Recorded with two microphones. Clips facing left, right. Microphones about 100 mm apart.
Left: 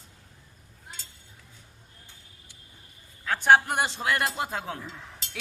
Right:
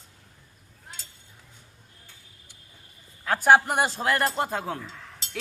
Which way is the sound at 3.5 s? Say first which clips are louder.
Right 1 dB; 5° right (ahead or behind).